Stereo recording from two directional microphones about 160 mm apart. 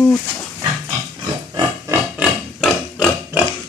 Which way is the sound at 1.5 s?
20° right (ahead or behind).